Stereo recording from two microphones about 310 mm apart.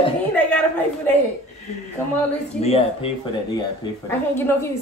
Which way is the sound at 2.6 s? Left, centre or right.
Centre.